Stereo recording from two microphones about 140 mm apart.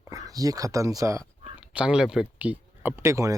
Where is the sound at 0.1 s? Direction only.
25° right (ahead or behind).